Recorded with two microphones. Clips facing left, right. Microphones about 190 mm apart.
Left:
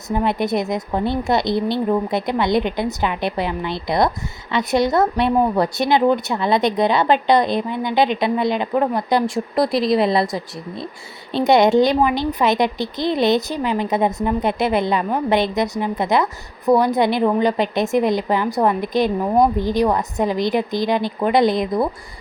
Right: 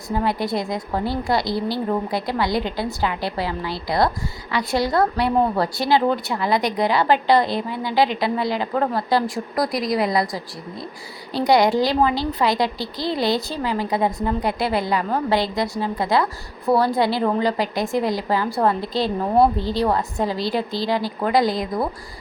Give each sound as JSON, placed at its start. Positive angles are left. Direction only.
{"t": 0.1, "sound": "a woman's voice", "side_deg": 20}